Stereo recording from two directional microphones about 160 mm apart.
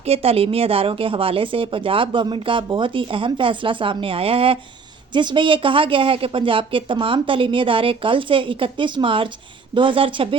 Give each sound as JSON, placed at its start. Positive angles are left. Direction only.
{"t": 0.1, "sound": "speech", "side_deg": -40}